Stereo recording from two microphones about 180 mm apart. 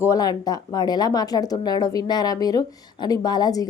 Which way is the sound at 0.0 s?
20° left (ahead or behind).